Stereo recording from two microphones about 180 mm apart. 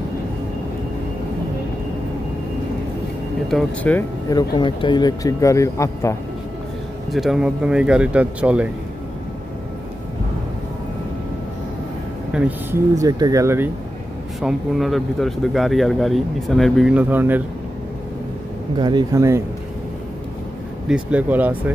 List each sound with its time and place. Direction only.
3.4 s speech: 5° left (ahead or behind)
4.3 s speech: 25° left (ahead or behind)
7.1 s speech: centre (ahead or behind)
12.3 s speech: 5° right (ahead or behind)
12.9 s speech: 20° right (ahead or behind)
14.4 s speech: centre (ahead or behind)
18.8 s speech: 25° right (ahead or behind)
20.9 s speech: 5° right (ahead or behind)